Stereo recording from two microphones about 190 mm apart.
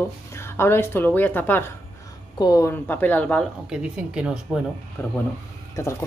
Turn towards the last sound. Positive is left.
turn(degrees=15)  # may be behind; listen again after turning